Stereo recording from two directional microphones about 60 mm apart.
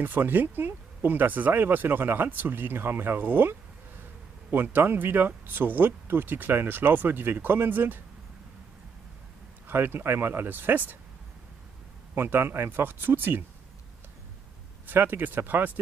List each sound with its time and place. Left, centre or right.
0.0 s speech: right
9.7 s speech: right
12.2 s speech: right
14.9 s speech: right